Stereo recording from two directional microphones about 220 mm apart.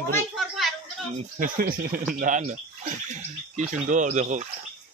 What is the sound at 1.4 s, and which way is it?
Speech, 40° right (ahead or behind).